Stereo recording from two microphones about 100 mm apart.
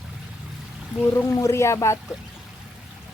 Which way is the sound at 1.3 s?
30° left (ahead or behind).